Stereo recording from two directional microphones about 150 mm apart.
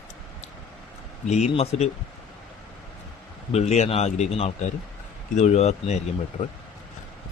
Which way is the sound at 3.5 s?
45° left (ahead or behind).